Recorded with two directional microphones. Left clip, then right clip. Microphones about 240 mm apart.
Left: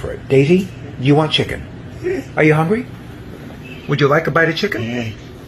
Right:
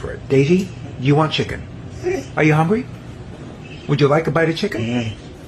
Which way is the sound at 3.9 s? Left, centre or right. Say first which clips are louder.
Left 2 dB; centre.